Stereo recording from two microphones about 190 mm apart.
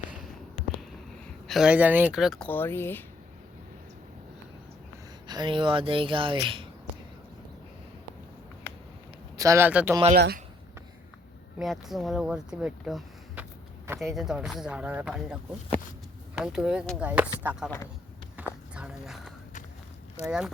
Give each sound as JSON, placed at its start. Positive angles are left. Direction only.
{"t": 1.5, "sound": "speech", "side_deg": -5}
{"t": 2.5, "sound": "speech", "side_deg": 10}
{"t": 5.3, "sound": "speech", "side_deg": -25}
{"t": 9.4, "sound": "speech", "side_deg": -15}
{"t": 10.2, "sound": "speech", "side_deg": -60}
{"t": 11.6, "sound": "speech", "side_deg": 0}
{"t": 18.4, "sound": "a sound", "side_deg": -10}
{"t": 20.2, "sound": "speech", "side_deg": -5}